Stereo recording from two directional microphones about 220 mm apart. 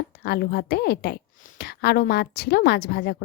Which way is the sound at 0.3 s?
45° left (ahead or behind).